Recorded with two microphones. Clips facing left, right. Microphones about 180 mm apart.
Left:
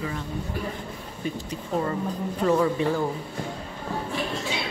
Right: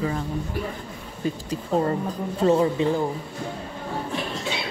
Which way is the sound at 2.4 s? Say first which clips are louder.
Right 3 dB; 25° right (ahead or behind).